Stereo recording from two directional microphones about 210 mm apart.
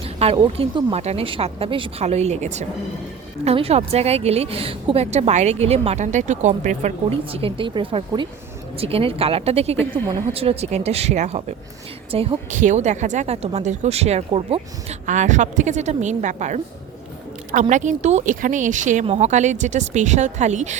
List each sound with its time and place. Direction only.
0.0 s a woman's voice: 25° right (ahead or behind)